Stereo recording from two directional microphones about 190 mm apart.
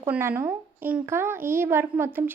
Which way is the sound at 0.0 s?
10° right (ahead or behind).